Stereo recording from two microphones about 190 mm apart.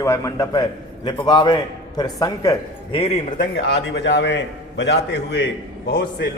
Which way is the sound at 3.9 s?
65° left (ahead or behind).